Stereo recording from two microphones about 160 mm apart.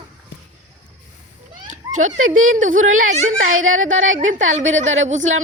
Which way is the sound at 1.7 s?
50° right (ahead or behind).